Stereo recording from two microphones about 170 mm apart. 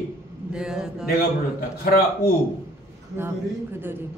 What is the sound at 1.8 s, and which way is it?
Speech, 65° left (ahead or behind).